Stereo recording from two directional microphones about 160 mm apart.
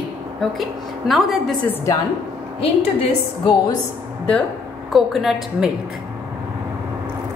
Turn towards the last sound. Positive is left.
turn(degrees=0)  # may be behind; listen again after turning